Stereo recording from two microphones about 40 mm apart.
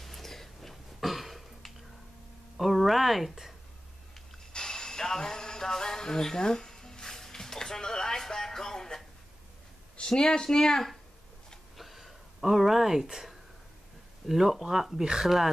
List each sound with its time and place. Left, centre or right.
0.0 s a sound: centre
2.5 s speech: centre
4.5 s music: centre
9.9 s speech: centre
11.7 s a sound: centre
14.2 s speech: centre